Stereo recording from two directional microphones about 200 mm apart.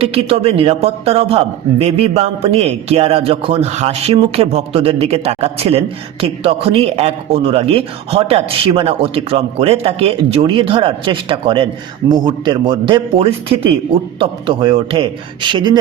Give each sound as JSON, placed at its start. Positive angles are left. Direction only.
{"t": 0.0, "sound": "a man's voice", "side_deg": -30}